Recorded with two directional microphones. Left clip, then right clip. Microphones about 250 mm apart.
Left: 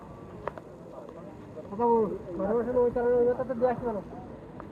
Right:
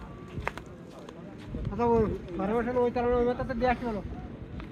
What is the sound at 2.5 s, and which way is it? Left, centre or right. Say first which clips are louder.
Speech: left 1 dB; centre.